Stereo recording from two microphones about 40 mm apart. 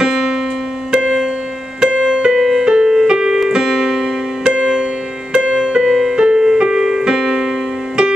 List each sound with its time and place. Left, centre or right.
0.0 s music: centre
0.9 s keyboard: centre
2.4 s music: centre